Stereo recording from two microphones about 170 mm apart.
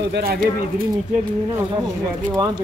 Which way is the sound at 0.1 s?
65° right (ahead or behind).